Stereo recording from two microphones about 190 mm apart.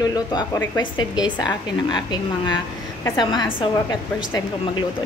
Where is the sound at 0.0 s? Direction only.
20° left (ahead or behind).